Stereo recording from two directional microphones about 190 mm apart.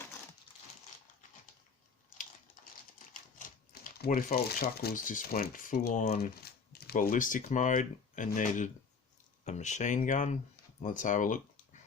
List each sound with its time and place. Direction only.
3.1 s speech: 45° left (ahead or behind)